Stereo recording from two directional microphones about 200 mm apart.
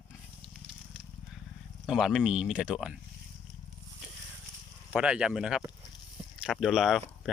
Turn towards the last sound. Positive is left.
turn(degrees=0)  # may be behind; listen again after turning